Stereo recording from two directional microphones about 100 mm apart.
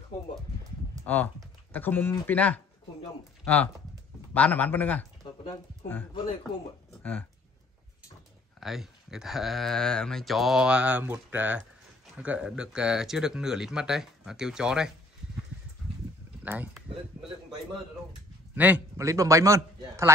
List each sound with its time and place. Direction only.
1.0 s speech: 15° left (ahead or behind)
7.0 s speech: 15° left (ahead or behind)
8.5 s speech: 5° right (ahead or behind)
16.4 s speech: 15° right (ahead or behind)
18.5 s a man's voice: 15° right (ahead or behind)
18.9 s a man's voice: 30° right (ahead or behind)